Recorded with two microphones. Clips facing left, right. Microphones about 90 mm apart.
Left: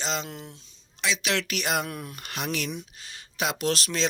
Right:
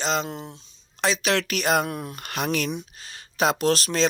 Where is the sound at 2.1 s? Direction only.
55° right (ahead or behind).